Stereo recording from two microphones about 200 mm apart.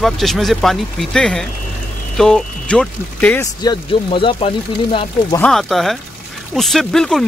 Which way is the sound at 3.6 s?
25° left (ahead or behind).